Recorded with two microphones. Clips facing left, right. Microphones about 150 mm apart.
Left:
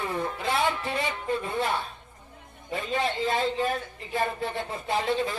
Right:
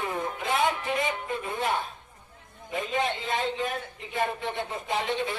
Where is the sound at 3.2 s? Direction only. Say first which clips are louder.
Left 3 dB; 40° left (ahead or behind).